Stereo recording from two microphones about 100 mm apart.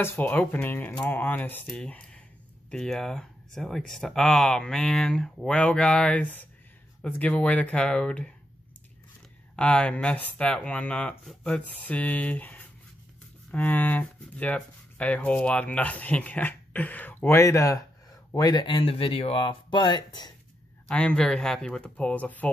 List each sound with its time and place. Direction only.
0.0 s speech: 20° left (ahead or behind)
1.7 s speech: 10° left (ahead or behind)
9.6 s speech: 10° left (ahead or behind)
17.4 s speech: 30° left (ahead or behind)
18.3 s speech: 45° left (ahead or behind)
18.8 s speech: 65° left (ahead or behind); by 20.3 s 45° left (ahead or behind)
20.9 s speech: 10° left (ahead or behind)